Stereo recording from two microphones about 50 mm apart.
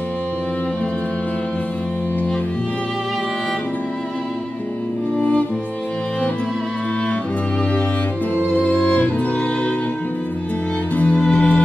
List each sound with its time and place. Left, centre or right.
8.4 s music: left
11.0 s violin: left